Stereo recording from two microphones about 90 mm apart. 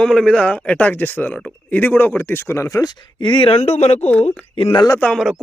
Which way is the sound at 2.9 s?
60° left (ahead or behind).